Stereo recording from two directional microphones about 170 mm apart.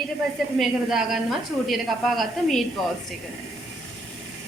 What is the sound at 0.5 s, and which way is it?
A man's voice, centre (ahead or behind).